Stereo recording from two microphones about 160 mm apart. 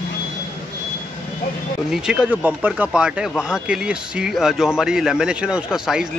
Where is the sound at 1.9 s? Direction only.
5° right (ahead or behind).